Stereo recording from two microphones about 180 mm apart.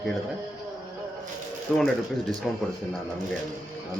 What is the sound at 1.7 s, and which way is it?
Speech, centre (ahead or behind).